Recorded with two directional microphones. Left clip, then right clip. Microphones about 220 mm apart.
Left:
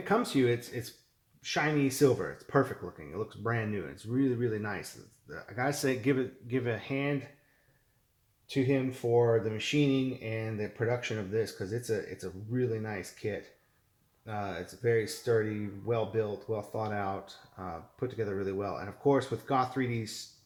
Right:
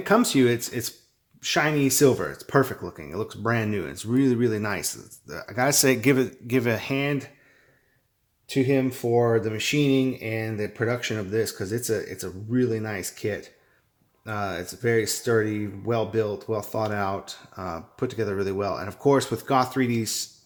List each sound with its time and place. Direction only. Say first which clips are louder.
0.0 s speech: right 8 dB; 45° right (ahead or behind)
8.4 s speech: right 7 dB; 30° right (ahead or behind)